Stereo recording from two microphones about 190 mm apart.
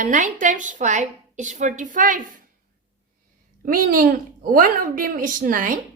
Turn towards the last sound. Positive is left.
turn(degrees=-45)  # may be behind; listen again after turning